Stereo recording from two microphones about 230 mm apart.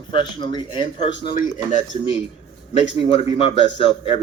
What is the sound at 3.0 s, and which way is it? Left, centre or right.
Speech, left.